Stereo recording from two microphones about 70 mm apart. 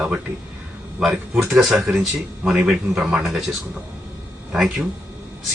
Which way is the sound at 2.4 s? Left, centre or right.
Centre.